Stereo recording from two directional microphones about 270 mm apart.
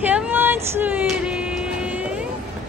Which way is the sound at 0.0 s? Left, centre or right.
Centre.